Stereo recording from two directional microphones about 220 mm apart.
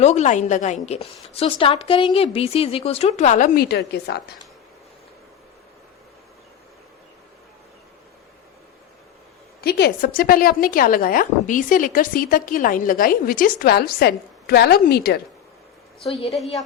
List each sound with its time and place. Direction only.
0.0 s a woman's voice: 30° left (ahead or behind); by 4.2 s 50° left (ahead or behind)
9.6 s a woman's voice: 45° left (ahead or behind)